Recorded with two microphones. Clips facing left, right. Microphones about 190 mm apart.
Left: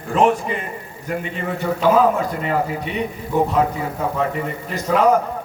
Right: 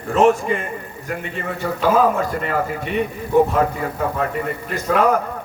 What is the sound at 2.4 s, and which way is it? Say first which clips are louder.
Speech: left 1 dB; 50° right (ahead or behind).